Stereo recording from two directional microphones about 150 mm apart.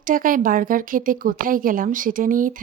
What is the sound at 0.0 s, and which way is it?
A woman's voice, 65° right (ahead or behind).